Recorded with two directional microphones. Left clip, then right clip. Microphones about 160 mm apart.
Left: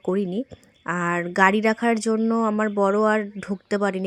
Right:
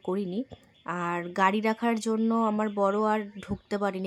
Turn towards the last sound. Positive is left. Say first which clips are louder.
# left 6 dB
turn(degrees=25)  # may be behind; listen again after turning